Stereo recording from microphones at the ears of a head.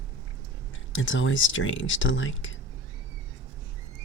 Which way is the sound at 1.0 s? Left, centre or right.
Left.